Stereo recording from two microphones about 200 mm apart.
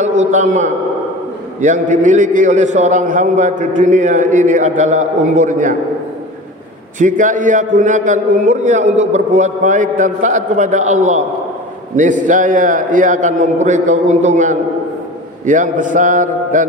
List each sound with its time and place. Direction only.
0.3 s a man's voice: 40° right (ahead or behind)
7.0 s a man's voice: 40° right (ahead or behind)